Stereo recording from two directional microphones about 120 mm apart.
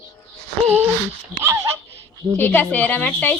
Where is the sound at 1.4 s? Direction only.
20° right (ahead or behind).